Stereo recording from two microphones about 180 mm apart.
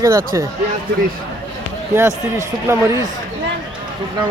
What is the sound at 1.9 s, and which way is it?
A man's voice, 15° right (ahead or behind).